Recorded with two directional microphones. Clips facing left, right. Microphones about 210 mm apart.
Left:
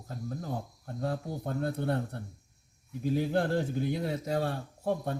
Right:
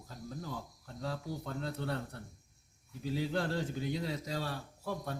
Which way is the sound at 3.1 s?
55° left (ahead or behind).